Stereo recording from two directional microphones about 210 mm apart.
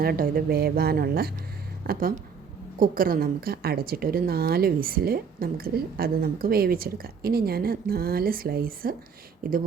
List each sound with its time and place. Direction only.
0.0 s a woman's voice: 45° right (ahead or behind)